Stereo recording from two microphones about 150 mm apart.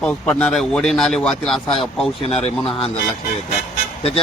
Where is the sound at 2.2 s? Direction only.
40° left (ahead or behind).